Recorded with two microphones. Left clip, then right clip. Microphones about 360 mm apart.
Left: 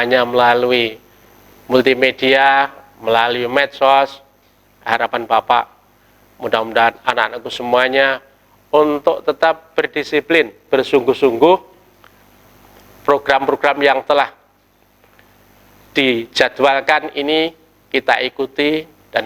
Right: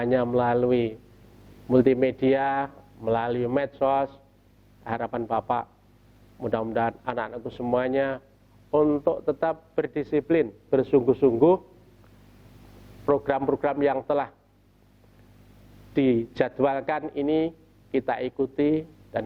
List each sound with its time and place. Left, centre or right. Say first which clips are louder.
0.0 s a man's voice: left 11 dB; centre
13.1 s a man's voice: left 10 dB; centre
15.9 s a man's voice: left 8 dB; centre